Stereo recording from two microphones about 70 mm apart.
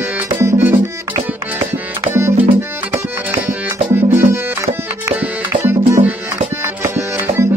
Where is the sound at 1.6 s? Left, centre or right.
Right.